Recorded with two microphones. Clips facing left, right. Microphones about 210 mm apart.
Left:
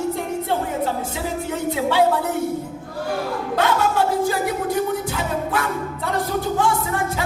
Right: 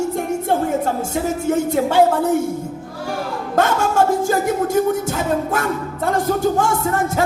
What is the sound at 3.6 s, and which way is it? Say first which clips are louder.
Music: right 4 dB; 45° right (ahead or behind).